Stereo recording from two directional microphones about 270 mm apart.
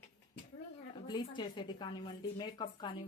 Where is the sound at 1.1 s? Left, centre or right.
Centre.